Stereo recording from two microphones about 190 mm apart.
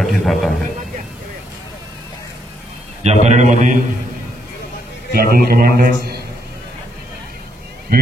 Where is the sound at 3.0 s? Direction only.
35° right (ahead or behind).